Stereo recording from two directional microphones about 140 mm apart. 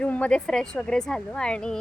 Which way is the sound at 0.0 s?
10° left (ahead or behind).